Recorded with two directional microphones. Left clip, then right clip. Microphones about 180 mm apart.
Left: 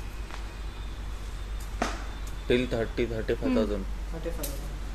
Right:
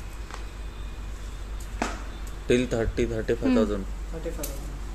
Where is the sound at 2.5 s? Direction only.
55° right (ahead or behind).